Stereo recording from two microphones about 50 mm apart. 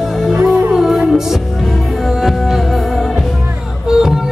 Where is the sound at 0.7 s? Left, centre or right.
Centre.